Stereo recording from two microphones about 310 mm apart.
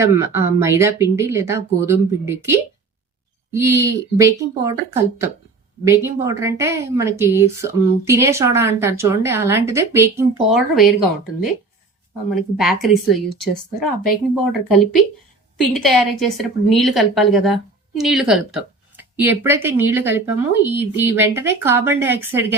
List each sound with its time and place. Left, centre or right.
0.0 s a woman's voice: centre
12.3 s speech: centre
15.7 s a woman's voice: centre